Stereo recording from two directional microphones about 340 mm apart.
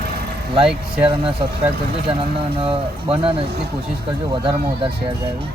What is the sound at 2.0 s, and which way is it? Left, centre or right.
Speech, centre.